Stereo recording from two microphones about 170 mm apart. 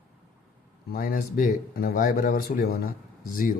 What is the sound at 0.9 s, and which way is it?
Speech, 60° left (ahead or behind).